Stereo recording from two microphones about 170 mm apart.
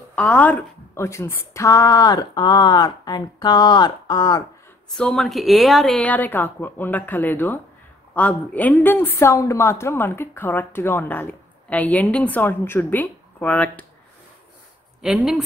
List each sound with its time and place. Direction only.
0.1 s a woman's voice: 10° left (ahead or behind)
4.9 s a woman's voice: 5° left (ahead or behind)
15.0 s speech: 5° right (ahead or behind)